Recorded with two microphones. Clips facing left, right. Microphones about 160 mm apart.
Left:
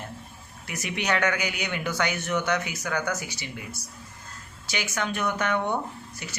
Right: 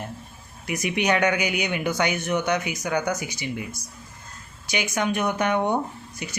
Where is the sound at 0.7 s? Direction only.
15° right (ahead or behind).